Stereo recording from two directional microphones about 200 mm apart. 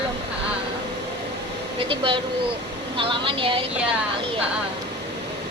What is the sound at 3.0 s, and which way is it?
Speech, 25° right (ahead or behind).